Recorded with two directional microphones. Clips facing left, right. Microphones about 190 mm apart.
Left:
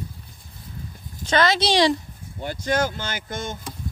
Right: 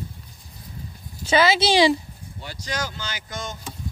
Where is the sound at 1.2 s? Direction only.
5° right (ahead or behind).